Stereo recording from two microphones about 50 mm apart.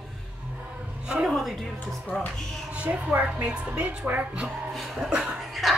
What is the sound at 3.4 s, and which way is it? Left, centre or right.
Speech, right.